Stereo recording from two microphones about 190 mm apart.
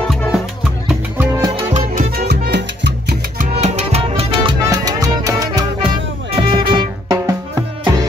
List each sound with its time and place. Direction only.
0.1 s music: centre (ahead or behind)
0.8 s music: 10° right (ahead or behind)
1.7 s salsa music: 50° right (ahead or behind)
3.5 s music: 35° right (ahead or behind)